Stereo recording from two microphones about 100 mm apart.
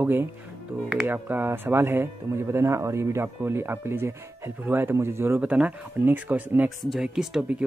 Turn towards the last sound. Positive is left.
turn(degrees=-5)  # may be behind; listen again after turning